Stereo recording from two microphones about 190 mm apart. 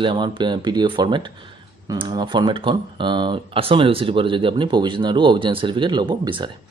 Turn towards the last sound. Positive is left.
turn(degrees=-25)  # may be behind; listen again after turning